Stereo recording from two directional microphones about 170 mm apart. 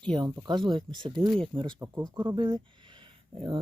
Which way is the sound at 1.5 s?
30° right (ahead or behind).